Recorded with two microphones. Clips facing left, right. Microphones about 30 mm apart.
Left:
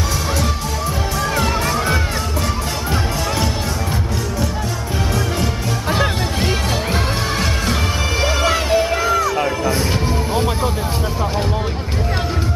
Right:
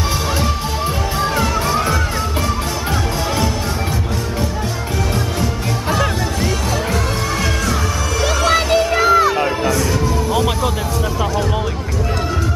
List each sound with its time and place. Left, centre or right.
5.9 s music: left
8.2 s music: left
8.7 s a sound: right
9.7 s music: left
10.3 s music: right